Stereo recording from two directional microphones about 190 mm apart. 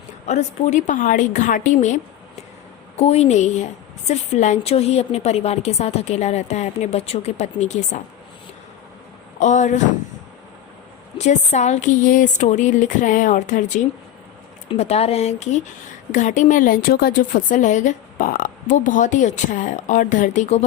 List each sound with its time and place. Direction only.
0.3 s a woman's voice: 35° left (ahead or behind)
9.4 s a woman's voice: 40° left (ahead or behind)
11.2 s a woman's voice: 35° left (ahead or behind)